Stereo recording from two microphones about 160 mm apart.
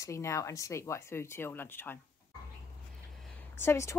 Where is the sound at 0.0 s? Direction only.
20° left (ahead or behind).